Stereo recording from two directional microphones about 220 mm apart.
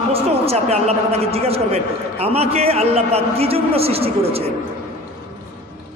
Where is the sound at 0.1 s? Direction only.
30° right (ahead or behind).